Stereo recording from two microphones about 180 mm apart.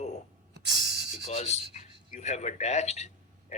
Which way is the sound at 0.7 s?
75° right (ahead or behind).